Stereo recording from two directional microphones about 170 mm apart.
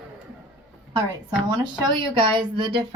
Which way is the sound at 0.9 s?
25° right (ahead or behind).